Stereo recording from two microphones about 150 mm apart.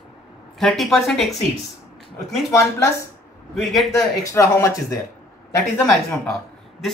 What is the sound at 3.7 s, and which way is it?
Speech, centre (ahead or behind).